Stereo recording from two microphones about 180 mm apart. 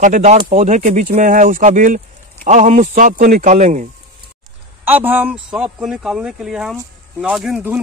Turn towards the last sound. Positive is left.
turn(degrees=-5)  # may be behind; listen again after turning